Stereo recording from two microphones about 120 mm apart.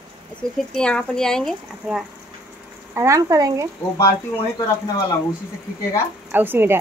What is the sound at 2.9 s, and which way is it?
Speech, 25° right (ahead or behind).